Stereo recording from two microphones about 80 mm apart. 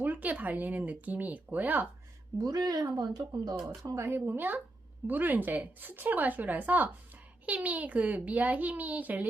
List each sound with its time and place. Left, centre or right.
0.0 s a woman's voice: right
2.4 s speech: right
3.9 s a woman's voice: right